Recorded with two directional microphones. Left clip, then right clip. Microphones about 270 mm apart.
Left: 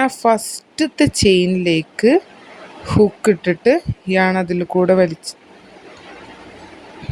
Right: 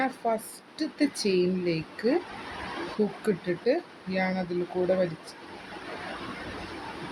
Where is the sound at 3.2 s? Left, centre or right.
Left.